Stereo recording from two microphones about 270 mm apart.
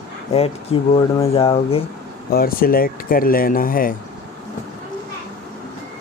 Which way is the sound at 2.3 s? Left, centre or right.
Left.